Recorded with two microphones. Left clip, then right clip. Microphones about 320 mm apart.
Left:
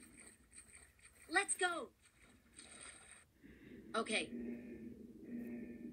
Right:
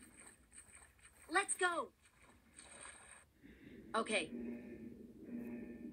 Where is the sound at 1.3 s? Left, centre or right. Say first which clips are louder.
Right 1 dB; centre.